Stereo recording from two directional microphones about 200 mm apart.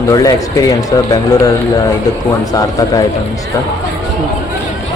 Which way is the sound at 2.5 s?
20° left (ahead or behind).